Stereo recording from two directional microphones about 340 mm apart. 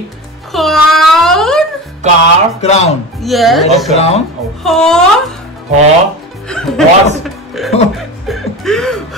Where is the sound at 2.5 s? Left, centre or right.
Centre.